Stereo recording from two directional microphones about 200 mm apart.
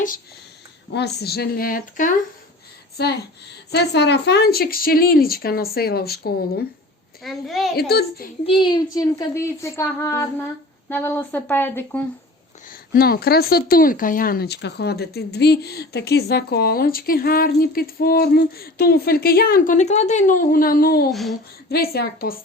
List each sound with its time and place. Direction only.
0.9 s a woman's voice: 55° left (ahead or behind)
3.0 s a woman's voice: 55° left (ahead or behind)
7.2 s a woman's voice: centre (ahead or behind)
7.8 s a woman's voice: 50° left (ahead or behind)
8.4 s a woman's voice: 25° left (ahead or behind)
12.7 s a woman's voice: 50° left (ahead or behind)
21.1 s a woman's voice: centre (ahead or behind)
21.7 s a woman's voice: 50° left (ahead or behind)